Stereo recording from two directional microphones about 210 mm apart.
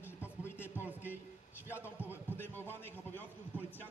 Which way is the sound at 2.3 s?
10° left (ahead or behind).